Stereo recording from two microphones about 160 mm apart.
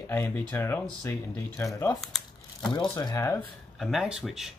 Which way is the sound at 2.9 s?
25° left (ahead or behind).